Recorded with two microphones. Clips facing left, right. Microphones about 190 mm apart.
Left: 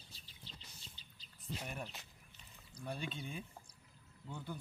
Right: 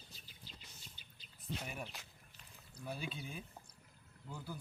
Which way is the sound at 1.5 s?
5° right (ahead or behind).